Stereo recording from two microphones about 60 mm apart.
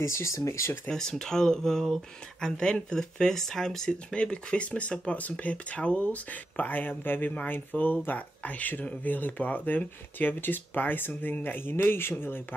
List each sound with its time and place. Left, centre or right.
0.0 s speech: left
0.8 s speech: centre; by 12.4 s left